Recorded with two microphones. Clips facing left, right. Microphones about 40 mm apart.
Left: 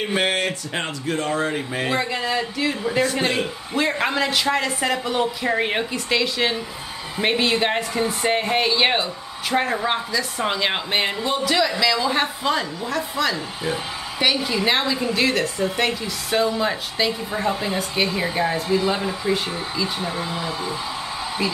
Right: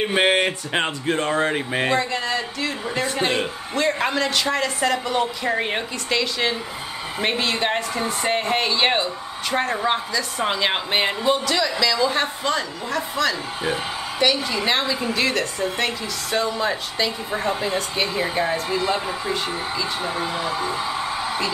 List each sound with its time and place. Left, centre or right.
0.1 s speech: right
2.0 s speech: centre
2.8 s speech: centre
3.7 s speech: centre
11.4 s speech: centre
19.8 s speech: centre
20.2 s speech: right